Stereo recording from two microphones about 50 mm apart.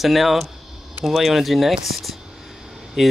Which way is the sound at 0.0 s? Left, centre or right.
Centre.